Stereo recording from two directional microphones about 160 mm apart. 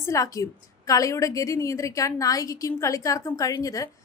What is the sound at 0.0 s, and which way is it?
A woman's voice, 20° left (ahead or behind).